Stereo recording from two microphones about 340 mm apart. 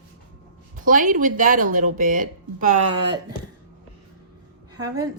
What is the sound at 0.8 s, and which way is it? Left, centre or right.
Speech, right.